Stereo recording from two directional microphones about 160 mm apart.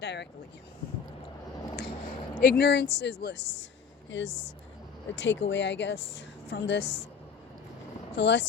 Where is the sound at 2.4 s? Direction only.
85° left.